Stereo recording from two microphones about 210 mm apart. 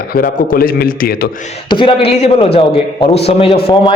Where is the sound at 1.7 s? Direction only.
25° left (ahead or behind).